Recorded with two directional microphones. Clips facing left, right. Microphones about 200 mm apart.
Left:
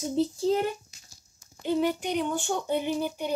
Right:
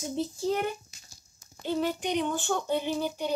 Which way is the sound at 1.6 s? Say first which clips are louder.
Left 3 dB; 15° left (ahead or behind).